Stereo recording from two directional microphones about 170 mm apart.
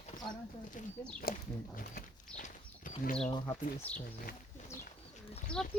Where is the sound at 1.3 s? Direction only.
60° left (ahead or behind).